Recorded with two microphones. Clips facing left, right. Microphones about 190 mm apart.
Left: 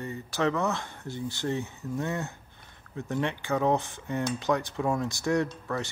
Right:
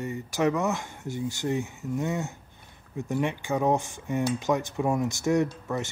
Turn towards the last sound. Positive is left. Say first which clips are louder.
# right 3 dB
turn(degrees=-20)  # may be behind; listen again after turning